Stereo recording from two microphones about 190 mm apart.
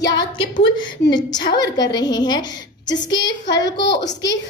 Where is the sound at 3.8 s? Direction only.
65° left (ahead or behind).